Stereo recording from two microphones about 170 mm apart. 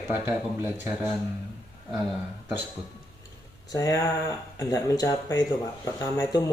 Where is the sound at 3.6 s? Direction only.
20° left (ahead or behind).